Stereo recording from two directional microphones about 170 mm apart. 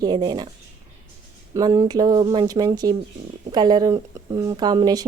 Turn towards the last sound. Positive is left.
turn(degrees=-20)  # may be behind; listen again after turning